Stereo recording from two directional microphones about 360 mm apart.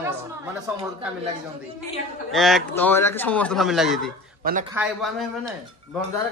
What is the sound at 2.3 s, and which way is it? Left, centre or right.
Speech, centre.